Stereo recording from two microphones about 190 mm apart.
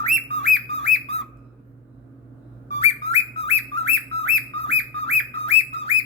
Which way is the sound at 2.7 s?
35° left (ahead or behind).